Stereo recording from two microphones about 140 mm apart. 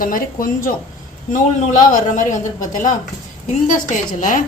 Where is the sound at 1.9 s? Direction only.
65° left (ahead or behind).